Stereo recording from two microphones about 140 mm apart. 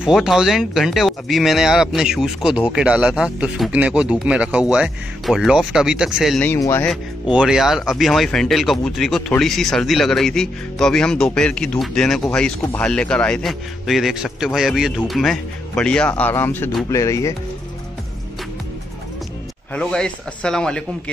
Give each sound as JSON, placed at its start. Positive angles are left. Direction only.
{"t": 0.0, "sound": "speech", "side_deg": -5}
{"t": 6.6, "sound": "speech", "side_deg": 20}
{"t": 6.9, "sound": "speech", "side_deg": -5}
{"t": 19.7, "sound": "speech", "side_deg": 5}